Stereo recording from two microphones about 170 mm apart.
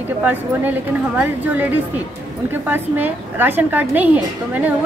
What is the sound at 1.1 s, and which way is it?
A woman's voice, 10° right (ahead or behind).